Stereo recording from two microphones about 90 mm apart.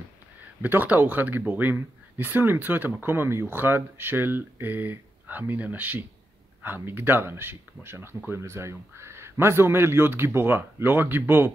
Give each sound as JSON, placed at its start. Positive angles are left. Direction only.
{"t": 0.6, "sound": "speech", "side_deg": -20}